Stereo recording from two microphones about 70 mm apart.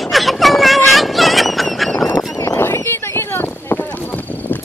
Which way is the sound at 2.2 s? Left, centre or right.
Left.